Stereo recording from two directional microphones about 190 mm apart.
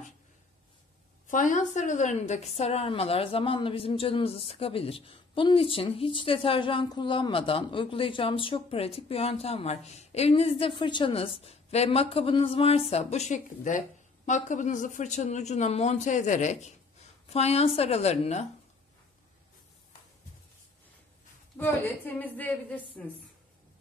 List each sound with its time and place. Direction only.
1.2 s a woman's voice: 45° left (ahead or behind)
21.5 s a woman's voice: 10° left (ahead or behind)